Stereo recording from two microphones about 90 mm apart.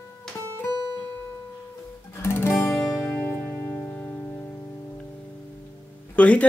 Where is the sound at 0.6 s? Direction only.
40° left (ahead or behind).